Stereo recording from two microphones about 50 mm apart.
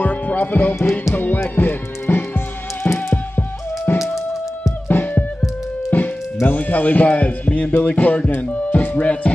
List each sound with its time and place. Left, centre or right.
0.0 s music: left
4.0 s music: centre
4.8 s music: left
8.4 s speech: left